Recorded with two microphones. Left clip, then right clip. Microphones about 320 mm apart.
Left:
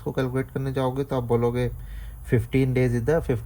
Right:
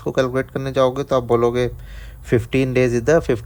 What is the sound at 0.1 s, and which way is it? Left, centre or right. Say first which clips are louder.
Speech: right 8 dB; right.